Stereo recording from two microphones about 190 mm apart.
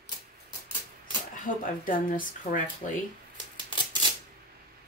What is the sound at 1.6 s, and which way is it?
Speech, 45° left (ahead or behind).